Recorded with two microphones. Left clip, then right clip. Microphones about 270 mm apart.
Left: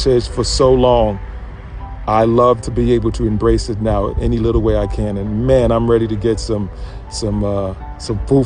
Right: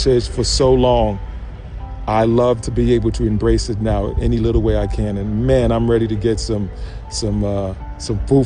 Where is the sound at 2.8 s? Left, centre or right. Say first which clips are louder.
Left 1 dB; centre.